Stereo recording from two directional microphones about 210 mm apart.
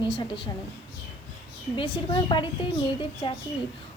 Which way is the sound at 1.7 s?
25° left (ahead or behind).